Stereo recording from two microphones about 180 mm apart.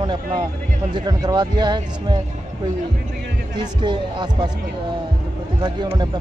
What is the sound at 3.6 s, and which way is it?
Speech, 25° right (ahead or behind).